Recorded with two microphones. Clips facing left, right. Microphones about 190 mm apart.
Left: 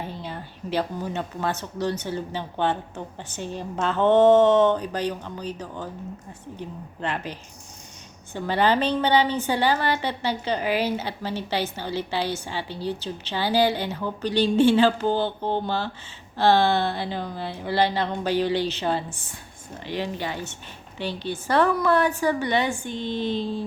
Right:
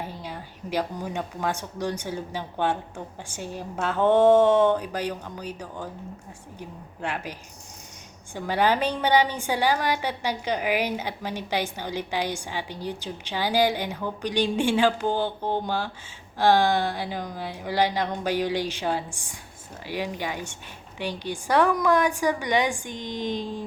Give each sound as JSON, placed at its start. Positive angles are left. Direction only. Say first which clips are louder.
{"t": 0.1, "sound": "a woman's voice", "louder": "left 2 dB", "side_deg": -10}